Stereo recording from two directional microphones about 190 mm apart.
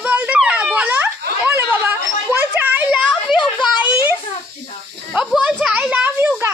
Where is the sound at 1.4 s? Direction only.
15° right (ahead or behind).